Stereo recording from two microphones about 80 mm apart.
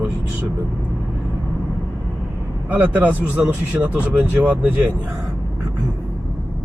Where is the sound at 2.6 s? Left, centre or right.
Right.